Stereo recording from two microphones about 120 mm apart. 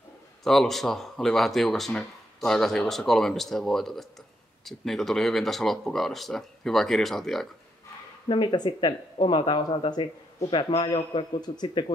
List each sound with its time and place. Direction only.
0.4 s speech: 5° left (ahead or behind)
8.3 s speech: 40° left (ahead or behind)